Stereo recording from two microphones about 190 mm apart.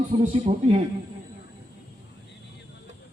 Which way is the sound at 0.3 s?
30° right (ahead or behind).